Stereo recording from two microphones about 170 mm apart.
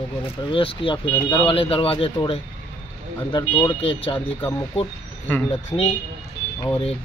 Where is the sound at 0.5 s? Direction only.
30° left (ahead or behind).